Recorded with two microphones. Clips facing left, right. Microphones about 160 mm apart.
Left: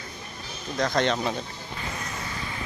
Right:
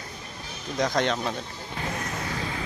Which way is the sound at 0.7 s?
15° right (ahead or behind).